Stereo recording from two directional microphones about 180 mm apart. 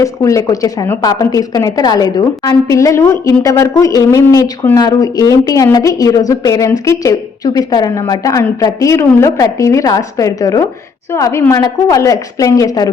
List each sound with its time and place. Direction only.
0.0 s speech: 15° left (ahead or behind)